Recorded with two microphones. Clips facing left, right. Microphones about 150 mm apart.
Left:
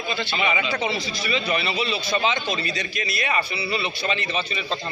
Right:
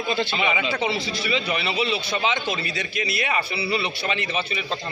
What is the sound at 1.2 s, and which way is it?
Speech, 15° right (ahead or behind).